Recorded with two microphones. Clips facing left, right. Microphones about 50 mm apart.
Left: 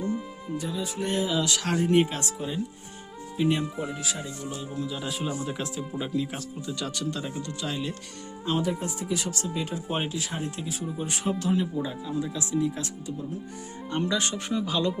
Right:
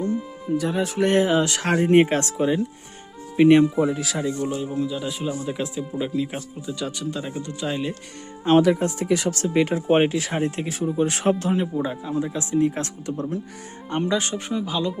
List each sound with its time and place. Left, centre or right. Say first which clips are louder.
0.5 s speech: right 9 dB; right
2.2 s speech: right 9 dB; right
4.5 s speech: right 8 dB; right
4.9 s speech: right 4 dB; centre; by 7.9 s right
8.4 s speech: right 11 dB; right
9.8 s speech: right 11 dB; right
11.3 s speech: right 3 dB; right
13.9 s speech: right 4 dB; right
14.5 s speech: right 1 dB; centre